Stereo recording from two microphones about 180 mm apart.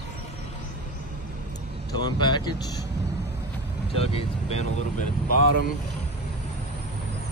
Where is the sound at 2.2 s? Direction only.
25° left (ahead or behind).